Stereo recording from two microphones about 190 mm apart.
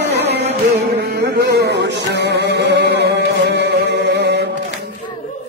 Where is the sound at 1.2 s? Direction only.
60° right (ahead or behind).